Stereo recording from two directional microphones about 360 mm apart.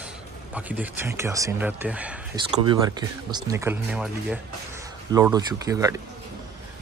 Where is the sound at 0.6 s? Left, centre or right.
Centre.